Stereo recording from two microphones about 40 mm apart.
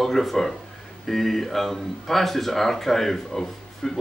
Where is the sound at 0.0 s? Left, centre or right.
Centre.